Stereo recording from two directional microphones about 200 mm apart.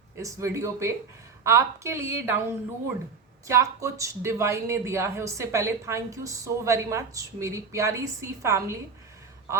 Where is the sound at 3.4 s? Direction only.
15° right (ahead or behind).